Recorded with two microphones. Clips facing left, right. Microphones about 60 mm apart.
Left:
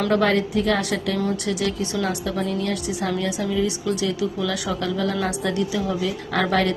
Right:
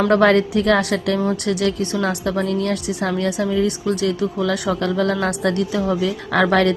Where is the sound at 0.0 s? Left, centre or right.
Right.